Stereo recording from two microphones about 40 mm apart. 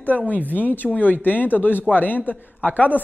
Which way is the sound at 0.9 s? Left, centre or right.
Left.